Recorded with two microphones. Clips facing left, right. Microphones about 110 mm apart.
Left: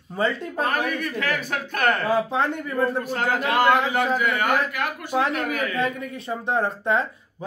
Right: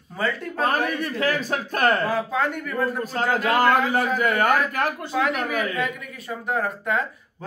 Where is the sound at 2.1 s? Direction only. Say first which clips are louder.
Left 2 dB; 25° left (ahead or behind).